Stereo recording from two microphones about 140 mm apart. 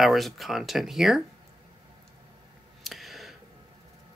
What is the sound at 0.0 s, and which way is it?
Speech, centre (ahead or behind).